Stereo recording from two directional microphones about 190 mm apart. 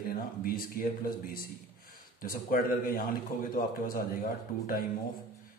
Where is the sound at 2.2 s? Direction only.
50° left (ahead or behind).